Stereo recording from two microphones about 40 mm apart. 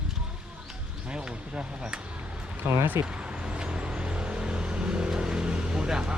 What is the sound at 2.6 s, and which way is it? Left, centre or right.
Speech, right.